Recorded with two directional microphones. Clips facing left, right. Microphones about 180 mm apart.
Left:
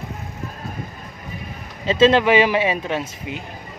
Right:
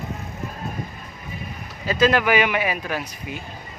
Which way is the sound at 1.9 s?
25° left (ahead or behind).